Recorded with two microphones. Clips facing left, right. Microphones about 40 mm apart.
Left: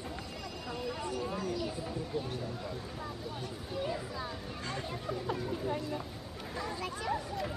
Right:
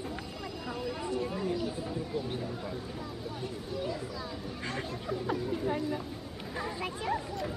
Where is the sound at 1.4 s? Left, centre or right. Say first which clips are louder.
Right 3 dB; right.